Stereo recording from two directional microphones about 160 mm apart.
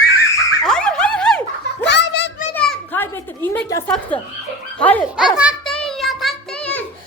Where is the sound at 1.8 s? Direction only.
90° left.